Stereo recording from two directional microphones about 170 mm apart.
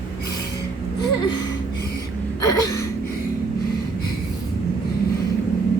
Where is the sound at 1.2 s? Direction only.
25° left (ahead or behind).